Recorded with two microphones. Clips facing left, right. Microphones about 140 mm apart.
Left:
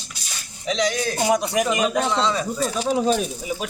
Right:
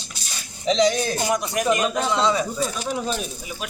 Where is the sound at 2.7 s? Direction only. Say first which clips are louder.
Left 5 dB; 30° left (ahead or behind).